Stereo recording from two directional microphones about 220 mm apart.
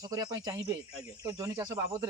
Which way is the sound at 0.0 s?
15° right (ahead or behind).